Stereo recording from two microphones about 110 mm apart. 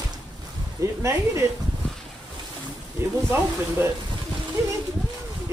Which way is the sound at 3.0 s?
20° right (ahead or behind).